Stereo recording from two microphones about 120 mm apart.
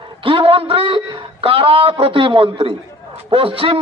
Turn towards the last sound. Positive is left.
turn(degrees=-50)  # may be behind; listen again after turning